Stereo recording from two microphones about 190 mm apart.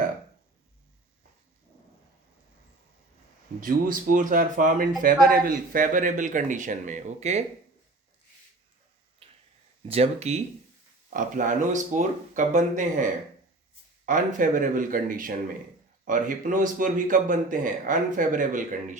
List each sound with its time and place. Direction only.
3.6 s a man's voice: 45° right (ahead or behind)
9.2 s finger snapping: 30° right (ahead or behind)
9.9 s a man's voice: 35° right (ahead or behind)